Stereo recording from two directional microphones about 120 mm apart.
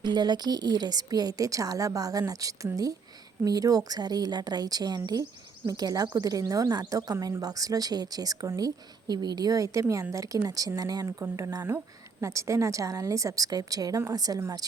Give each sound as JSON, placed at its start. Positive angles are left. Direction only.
{"t": 0.0, "sound": "a woman's voice", "side_deg": -35}